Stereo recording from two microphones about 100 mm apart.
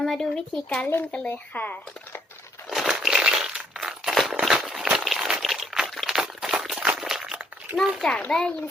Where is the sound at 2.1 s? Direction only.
25° left (ahead or behind).